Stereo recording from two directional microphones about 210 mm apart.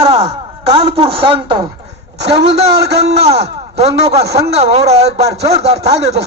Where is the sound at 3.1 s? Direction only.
30° right (ahead or behind).